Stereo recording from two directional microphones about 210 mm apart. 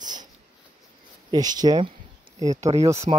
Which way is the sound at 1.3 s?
20° right (ahead or behind).